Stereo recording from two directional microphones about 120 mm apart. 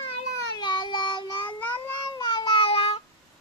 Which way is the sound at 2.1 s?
35° left (ahead or behind).